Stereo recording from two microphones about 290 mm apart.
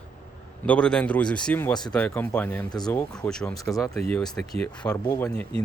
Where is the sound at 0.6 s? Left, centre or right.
Centre.